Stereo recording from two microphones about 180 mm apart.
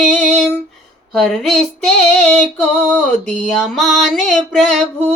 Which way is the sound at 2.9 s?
10° left (ahead or behind).